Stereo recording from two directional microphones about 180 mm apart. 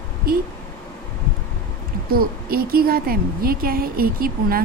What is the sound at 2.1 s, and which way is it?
A woman's voice, 55° right (ahead or behind).